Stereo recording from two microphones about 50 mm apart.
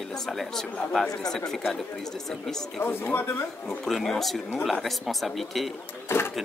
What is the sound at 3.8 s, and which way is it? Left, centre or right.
Speech, centre.